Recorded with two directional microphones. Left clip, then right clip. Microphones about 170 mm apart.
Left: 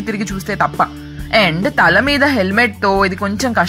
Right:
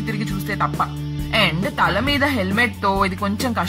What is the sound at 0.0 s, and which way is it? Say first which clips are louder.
A woman's voice: left 4 dB; 25° left (ahead or behind).